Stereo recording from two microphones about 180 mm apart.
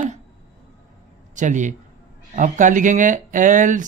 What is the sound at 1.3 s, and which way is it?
A man's voice, 45° right (ahead or behind).